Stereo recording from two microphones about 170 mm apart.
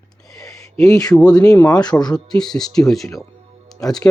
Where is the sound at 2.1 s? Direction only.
5° left (ahead or behind).